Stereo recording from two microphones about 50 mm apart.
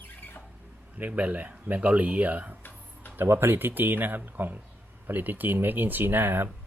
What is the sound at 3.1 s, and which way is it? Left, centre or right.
Speech, right.